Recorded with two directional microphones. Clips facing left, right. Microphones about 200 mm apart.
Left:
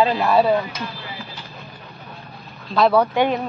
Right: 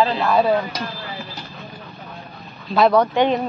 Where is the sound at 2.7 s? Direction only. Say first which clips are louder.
Right 1 dB; centre (ahead or behind).